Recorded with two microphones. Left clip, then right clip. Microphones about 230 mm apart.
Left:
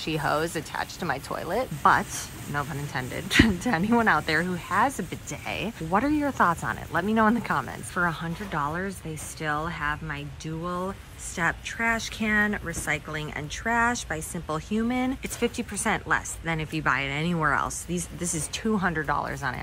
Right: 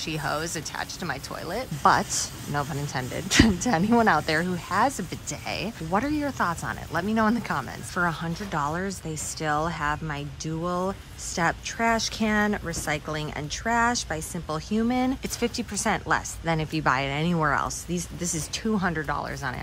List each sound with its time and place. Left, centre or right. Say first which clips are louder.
0.0 s speech: left 3 dB; centre